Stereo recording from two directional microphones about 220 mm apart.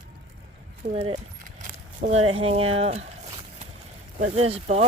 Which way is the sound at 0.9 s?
25° right (ahead or behind).